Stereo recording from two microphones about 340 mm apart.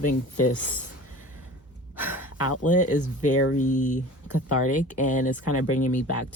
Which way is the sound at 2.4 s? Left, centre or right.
Left.